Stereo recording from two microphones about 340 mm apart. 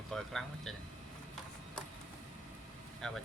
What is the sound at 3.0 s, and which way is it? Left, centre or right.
Speech, centre.